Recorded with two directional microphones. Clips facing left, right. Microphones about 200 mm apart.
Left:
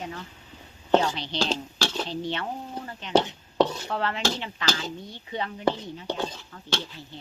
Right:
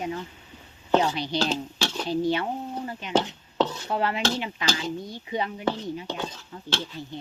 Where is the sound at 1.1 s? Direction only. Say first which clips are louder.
Right 2 dB; 10° right (ahead or behind).